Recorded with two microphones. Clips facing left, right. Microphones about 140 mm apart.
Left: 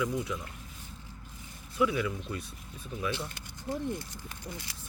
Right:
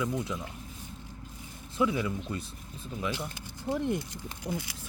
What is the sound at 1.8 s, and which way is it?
Speech, 25° right (ahead or behind).